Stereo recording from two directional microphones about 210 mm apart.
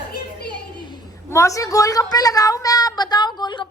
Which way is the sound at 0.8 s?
15° left (ahead or behind).